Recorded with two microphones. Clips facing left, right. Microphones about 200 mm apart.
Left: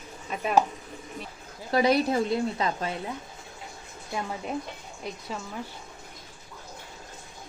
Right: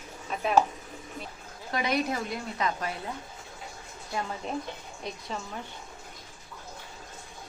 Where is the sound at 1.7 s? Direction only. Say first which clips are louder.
Left 6 dB; 35° left (ahead or behind).